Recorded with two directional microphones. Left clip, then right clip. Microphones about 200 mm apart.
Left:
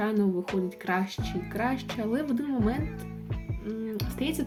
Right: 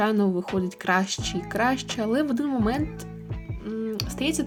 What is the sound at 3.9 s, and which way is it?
Speech, 30° right (ahead or behind).